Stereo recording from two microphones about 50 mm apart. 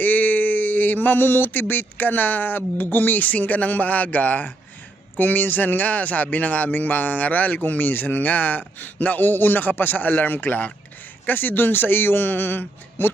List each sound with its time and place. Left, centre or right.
0.0 s a man's voice: left